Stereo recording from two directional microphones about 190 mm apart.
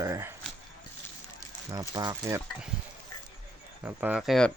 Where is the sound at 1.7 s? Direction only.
20° right (ahead or behind).